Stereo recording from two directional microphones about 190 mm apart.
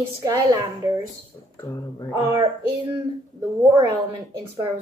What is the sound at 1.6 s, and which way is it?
Speech, 20° left (ahead or behind).